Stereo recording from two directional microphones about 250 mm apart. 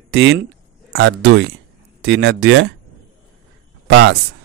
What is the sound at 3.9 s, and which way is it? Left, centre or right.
Speech, right.